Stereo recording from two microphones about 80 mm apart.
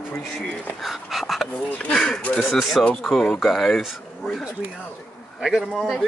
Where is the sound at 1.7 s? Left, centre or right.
Centre.